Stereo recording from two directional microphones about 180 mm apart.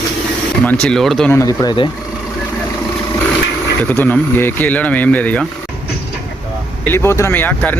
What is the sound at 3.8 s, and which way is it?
Speech, 10° left (ahead or behind).